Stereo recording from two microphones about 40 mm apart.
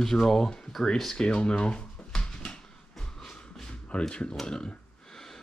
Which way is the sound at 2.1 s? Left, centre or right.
Centre.